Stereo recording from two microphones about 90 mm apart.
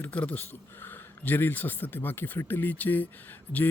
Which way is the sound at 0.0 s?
15° left (ahead or behind).